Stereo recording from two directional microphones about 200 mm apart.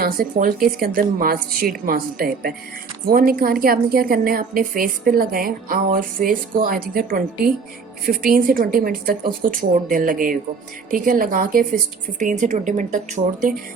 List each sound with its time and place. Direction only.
0.0 s a woman's voice: 45° right (ahead or behind)